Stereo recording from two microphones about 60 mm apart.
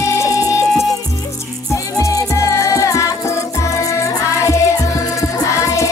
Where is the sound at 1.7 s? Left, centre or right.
Left.